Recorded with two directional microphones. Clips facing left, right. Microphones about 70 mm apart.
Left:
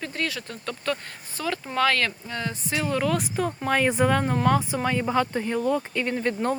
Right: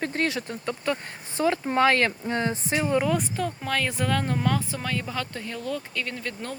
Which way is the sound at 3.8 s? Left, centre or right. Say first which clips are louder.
Left 5 dB; centre.